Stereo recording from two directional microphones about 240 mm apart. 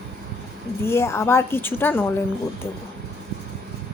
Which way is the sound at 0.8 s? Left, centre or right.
Centre.